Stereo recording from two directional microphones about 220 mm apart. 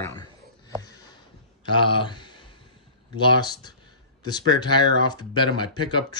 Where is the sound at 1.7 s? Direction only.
20° left (ahead or behind).